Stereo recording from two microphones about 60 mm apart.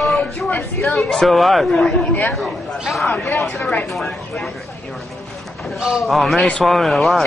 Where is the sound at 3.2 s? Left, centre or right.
Centre.